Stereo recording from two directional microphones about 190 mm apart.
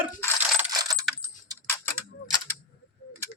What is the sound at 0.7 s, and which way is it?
Coin, 20° right (ahead or behind).